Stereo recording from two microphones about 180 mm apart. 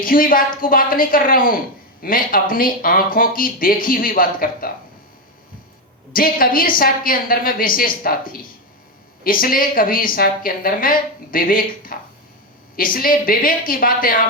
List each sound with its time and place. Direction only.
0.0 s speech: 50° left (ahead or behind)
6.1 s speech: 50° left (ahead or behind)